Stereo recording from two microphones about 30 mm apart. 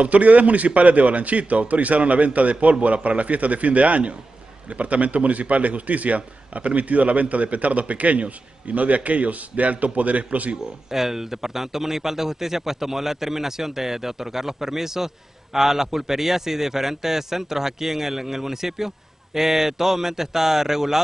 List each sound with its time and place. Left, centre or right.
0.0 s a man's voice: right
10.9 s a man's voice: centre